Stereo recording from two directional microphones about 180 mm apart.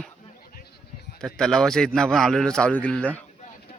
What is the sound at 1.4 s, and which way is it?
A man's voice, centre (ahead or behind).